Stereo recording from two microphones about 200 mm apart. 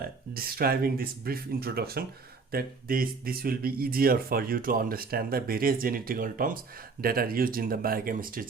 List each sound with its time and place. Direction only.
0.0 s speech: 50° right (ahead or behind)